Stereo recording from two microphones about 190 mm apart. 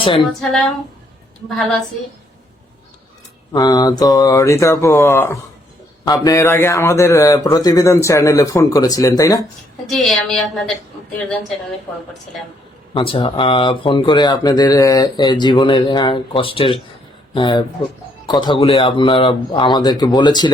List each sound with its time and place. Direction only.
3.5 s speech: 20° left (ahead or behind)
9.8 s a woman's voice: centre (ahead or behind)
12.9 s speech: 25° left (ahead or behind)